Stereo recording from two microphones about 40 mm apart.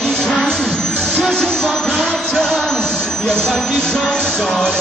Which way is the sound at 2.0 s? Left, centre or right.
Centre.